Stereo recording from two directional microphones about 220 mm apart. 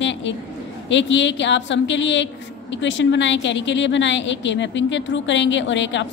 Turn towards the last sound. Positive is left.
turn(degrees=55)  # may be behind; listen again after turning